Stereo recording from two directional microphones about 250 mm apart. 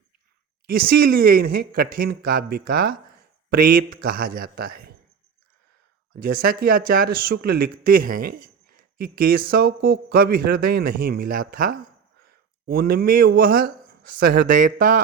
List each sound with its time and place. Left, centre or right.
0.7 s speech: right
6.1 s speech: right